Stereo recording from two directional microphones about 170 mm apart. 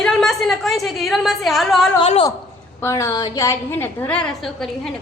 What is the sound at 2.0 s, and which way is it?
Speech, 35° left (ahead or behind).